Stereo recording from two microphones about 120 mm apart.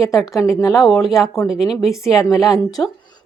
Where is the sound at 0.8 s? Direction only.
Centre (ahead or behind).